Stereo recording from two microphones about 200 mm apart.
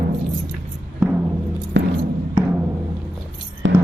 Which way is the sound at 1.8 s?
65° right (ahead or behind).